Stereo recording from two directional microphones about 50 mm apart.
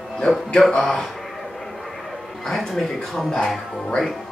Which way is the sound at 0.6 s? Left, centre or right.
Centre.